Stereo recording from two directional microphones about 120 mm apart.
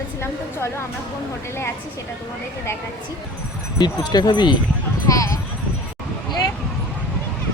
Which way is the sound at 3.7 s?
35° left (ahead or behind).